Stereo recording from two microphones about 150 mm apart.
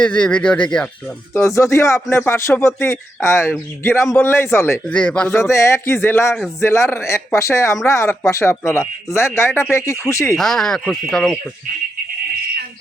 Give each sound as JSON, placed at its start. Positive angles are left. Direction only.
{"t": 0.0, "sound": "speech", "side_deg": 5}
{"t": 1.3, "sound": "speech", "side_deg": 20}
{"t": 5.4, "sound": "speech", "side_deg": 20}
{"t": 10.3, "sound": "speech", "side_deg": 5}